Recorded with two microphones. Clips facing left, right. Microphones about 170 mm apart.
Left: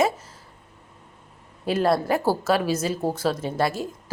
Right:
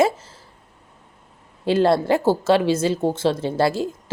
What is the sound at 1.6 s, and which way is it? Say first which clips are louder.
A woman's voice: right 4 dB; 30° right (ahead or behind).